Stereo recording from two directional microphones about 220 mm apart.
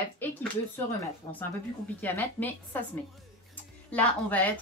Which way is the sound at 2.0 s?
10° left (ahead or behind).